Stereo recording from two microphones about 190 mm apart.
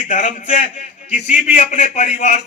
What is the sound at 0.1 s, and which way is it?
A man's voice, 40° left (ahead or behind).